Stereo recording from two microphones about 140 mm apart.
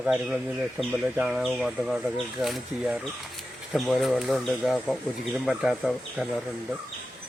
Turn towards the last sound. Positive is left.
turn(degrees=0)  # may be behind; listen again after turning